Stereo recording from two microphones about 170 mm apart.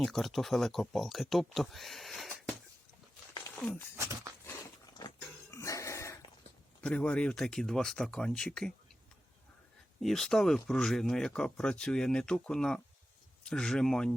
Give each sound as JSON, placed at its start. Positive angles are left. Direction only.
{"t": 0.0, "sound": "speech", "side_deg": 0}
{"t": 3.6, "sound": "speech", "side_deg": 5}
{"t": 3.9, "sound": "speech", "side_deg": -15}
{"t": 4.9, "sound": "dog", "side_deg": 20}
{"t": 6.8, "sound": "speech", "side_deg": 5}
{"t": 10.0, "sound": "speech", "side_deg": 0}